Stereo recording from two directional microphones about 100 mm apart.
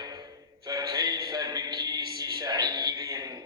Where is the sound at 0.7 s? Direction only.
40° right (ahead or behind).